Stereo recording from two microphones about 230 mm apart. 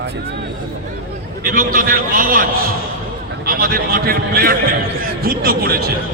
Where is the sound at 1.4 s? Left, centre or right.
Right.